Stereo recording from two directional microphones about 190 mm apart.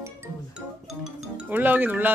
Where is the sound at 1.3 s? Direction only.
10° right (ahead or behind).